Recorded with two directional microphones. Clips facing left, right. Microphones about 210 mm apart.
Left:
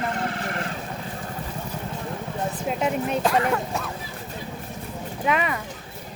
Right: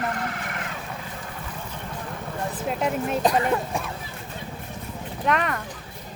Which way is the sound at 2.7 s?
Centre (ahead or behind).